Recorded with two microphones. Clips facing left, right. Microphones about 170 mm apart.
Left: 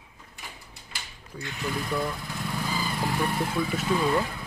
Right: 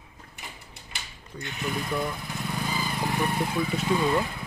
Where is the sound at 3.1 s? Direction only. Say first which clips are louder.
Right 1 dB; 20° right (ahead or behind).